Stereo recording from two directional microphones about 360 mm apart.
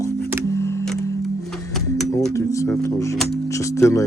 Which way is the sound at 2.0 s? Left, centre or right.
Centre.